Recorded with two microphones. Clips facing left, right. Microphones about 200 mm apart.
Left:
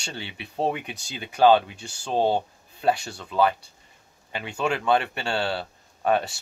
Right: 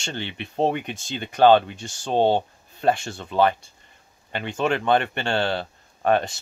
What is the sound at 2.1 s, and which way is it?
Speech, 25° right (ahead or behind).